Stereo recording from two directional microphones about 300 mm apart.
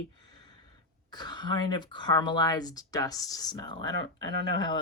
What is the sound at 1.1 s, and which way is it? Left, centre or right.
Speech, centre.